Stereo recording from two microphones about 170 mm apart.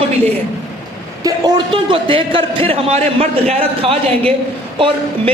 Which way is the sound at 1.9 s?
30° right (ahead or behind).